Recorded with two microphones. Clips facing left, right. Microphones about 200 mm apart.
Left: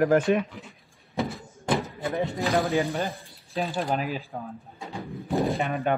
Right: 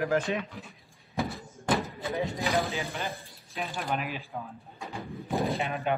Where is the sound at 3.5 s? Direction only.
35° left (ahead or behind).